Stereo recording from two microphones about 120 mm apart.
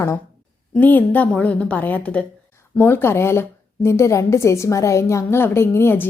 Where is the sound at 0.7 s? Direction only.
15° left (ahead or behind).